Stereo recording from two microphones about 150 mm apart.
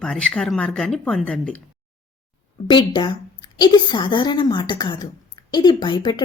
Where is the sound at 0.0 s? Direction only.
5° left (ahead or behind).